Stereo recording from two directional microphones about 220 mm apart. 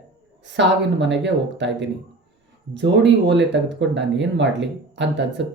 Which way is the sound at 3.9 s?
55° right (ahead or behind).